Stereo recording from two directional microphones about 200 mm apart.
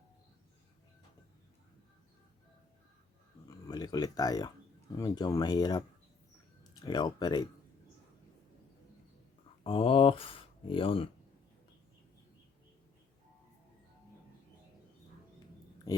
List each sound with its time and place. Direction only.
3.4 s speech: 20° left (ahead or behind)
6.8 s speech: 20° left (ahead or behind)
9.6 s speech: 25° left (ahead or behind)